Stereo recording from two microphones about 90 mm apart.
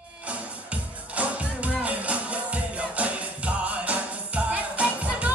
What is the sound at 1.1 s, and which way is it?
Music, 15° right (ahead or behind).